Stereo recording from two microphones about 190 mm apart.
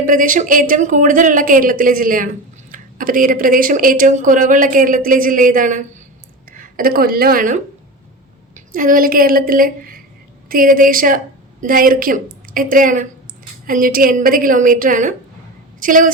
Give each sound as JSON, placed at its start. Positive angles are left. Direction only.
{"t": 0.0, "sound": "a woman's voice", "side_deg": -45}